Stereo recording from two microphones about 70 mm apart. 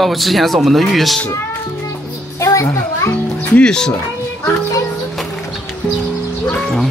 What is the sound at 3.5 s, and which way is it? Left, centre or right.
Speech, centre.